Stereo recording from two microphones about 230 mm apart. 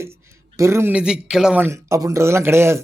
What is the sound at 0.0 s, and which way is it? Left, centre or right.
A man's voice, centre.